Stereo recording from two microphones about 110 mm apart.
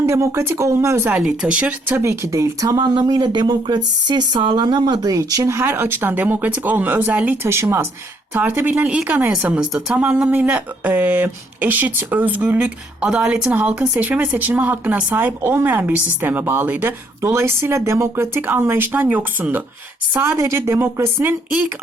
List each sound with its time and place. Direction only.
0.0 s a woman's voice: 30° right (ahead or behind)
1.1 s a woman's voice: 10° right (ahead or behind)
1.9 s speech: 25° right (ahead or behind)
7.4 s a woman's voice: 25° right (ahead or behind)